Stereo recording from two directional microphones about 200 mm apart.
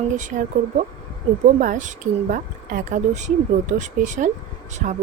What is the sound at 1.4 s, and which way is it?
Speech, 40° right (ahead or behind).